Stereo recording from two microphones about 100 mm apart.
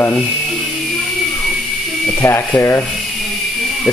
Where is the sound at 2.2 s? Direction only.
25° left (ahead or behind).